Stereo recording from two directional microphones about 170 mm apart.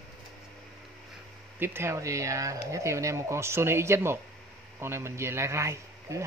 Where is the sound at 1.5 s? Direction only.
15° right (ahead or behind).